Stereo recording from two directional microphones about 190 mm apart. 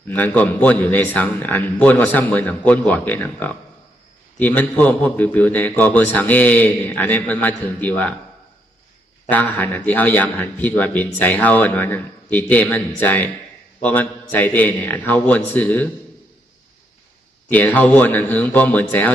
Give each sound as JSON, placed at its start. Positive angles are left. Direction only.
{"t": 0.1, "sound": "a man's voice", "side_deg": 10}
{"t": 9.3, "sound": "a man's voice", "side_deg": 10}
{"t": 14.3, "sound": "a man's voice", "side_deg": 10}
{"t": 17.5, "sound": "a man's voice", "side_deg": 10}